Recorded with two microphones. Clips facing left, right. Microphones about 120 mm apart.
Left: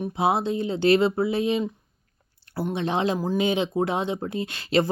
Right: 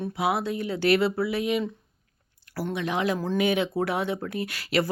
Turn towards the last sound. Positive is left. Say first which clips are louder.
# left 3 dB
turn(degrees=25)  # may be behind; listen again after turning